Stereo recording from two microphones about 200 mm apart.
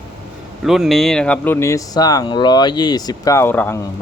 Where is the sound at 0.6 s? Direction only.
Centre (ahead or behind).